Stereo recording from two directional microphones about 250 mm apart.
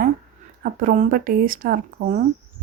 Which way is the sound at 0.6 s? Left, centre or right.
Right.